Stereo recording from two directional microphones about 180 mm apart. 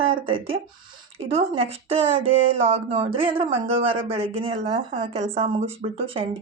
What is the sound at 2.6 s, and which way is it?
A woman's voice, 30° right (ahead or behind).